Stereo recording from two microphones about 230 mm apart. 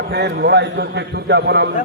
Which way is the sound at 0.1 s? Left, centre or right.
Right.